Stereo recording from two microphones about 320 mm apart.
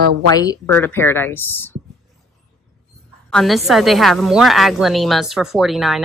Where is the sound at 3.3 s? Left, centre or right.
Centre.